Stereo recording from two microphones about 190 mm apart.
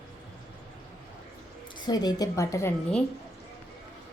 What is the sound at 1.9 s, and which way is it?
Speech, 20° left (ahead or behind).